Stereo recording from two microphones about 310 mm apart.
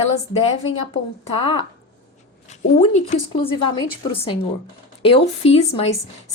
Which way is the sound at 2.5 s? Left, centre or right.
Left.